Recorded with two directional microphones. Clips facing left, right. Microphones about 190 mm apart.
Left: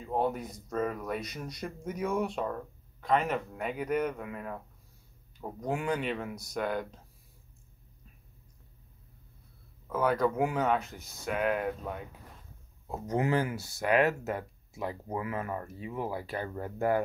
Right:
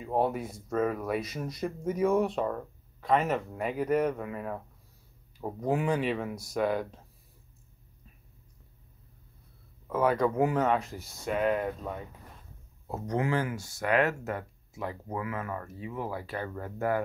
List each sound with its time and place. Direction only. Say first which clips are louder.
0.0 s speech: right 2 dB; 5° right (ahead or behind)
5.6 s speech: right 4 dB; centre (ahead or behind)
9.8 s speech: right 2 dB; centre (ahead or behind)
12.9 s speech: even; 5° left (ahead or behind)
13.2 s speech: left 2 dB; 20° left (ahead or behind)
13.9 s speech: left 1 dB; 25° left (ahead or behind)